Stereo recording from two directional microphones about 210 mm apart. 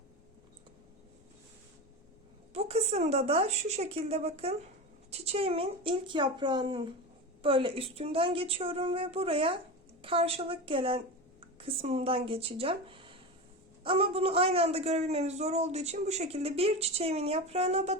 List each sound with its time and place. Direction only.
2.5 s a man's voice: 30° right (ahead or behind)